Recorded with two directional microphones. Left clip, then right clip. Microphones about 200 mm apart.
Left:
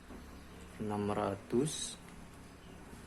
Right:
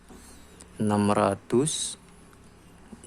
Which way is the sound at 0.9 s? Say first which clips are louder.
Right 12 dB; 45° right (ahead or behind).